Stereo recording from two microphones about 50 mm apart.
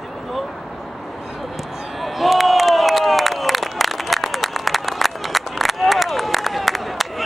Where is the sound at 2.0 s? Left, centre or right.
Centre.